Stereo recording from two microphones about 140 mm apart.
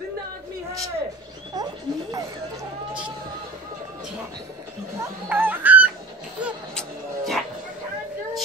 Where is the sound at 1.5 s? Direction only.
30° right (ahead or behind).